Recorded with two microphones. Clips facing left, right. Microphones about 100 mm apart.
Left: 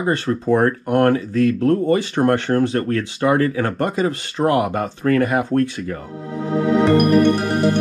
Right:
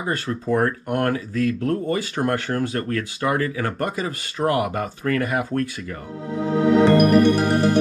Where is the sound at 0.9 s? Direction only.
50° left (ahead or behind).